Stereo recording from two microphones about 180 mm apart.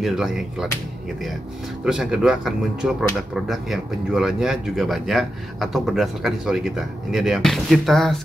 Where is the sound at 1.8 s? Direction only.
5° right (ahead or behind).